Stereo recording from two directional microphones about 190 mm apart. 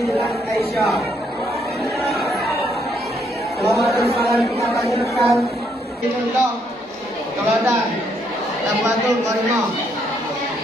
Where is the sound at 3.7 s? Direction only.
Centre (ahead or behind).